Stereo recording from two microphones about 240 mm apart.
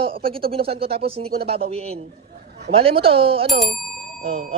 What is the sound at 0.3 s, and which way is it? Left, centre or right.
Speech, right.